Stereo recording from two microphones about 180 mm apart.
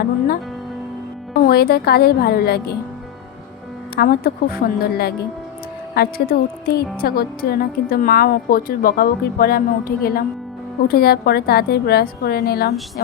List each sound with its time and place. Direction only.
1.4 s a woman's voice: 55° left (ahead or behind)
3.9 s a woman's voice: 55° left (ahead or behind)